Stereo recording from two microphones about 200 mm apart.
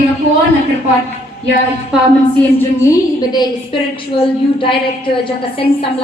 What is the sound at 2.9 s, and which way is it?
A woman's voice, 20° left (ahead or behind).